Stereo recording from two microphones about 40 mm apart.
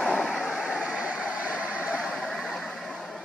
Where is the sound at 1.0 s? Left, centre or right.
Right.